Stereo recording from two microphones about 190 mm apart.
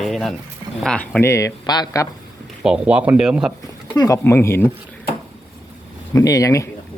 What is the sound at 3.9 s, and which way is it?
Speech, 15° left (ahead or behind).